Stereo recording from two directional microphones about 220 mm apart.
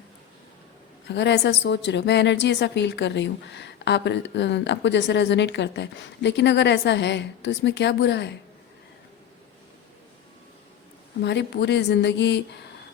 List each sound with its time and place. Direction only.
1.0 s a woman's voice: 50° left (ahead or behind)
11.2 s a woman's voice: 50° left (ahead or behind)